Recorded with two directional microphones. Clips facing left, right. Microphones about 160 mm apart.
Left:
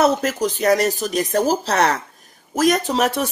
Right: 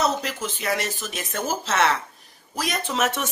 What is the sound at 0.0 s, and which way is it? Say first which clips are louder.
Speech: left 7 dB; 50° left (ahead or behind).